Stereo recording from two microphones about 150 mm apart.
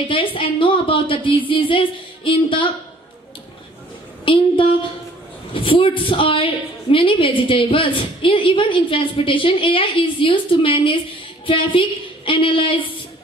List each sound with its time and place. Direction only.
0.1 s a woman's voice: 35° left (ahead or behind)
4.2 s a woman's voice: 35° left (ahead or behind)